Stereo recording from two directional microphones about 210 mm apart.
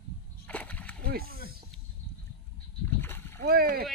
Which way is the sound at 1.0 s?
45° right (ahead or behind).